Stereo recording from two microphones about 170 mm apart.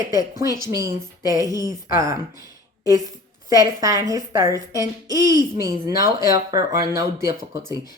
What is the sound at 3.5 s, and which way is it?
A woman's voice, 20° right (ahead or behind).